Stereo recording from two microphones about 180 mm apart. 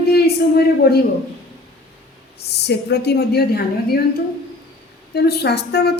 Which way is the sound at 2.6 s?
65° left (ahead or behind).